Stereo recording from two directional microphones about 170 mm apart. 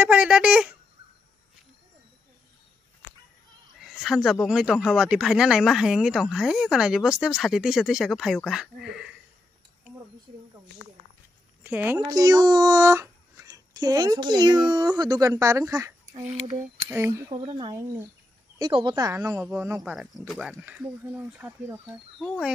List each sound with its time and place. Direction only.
0.0 s speech: 5° right (ahead or behind)
3.8 s speech: centre (ahead or behind)
11.6 s speech: 10° right (ahead or behind)
16.1 s speech: 40° right (ahead or behind)
16.9 s speech: 15° right (ahead or behind)
19.8 s speech: centre (ahead or behind)